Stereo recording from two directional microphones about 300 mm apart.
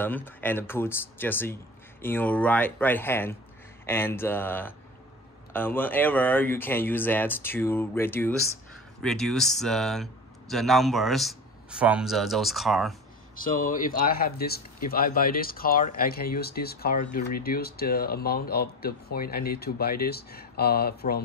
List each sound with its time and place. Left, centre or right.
0.0 s speech: centre
13.4 s speech: left